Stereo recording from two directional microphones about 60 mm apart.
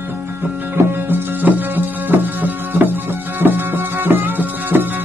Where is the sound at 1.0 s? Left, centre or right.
Right.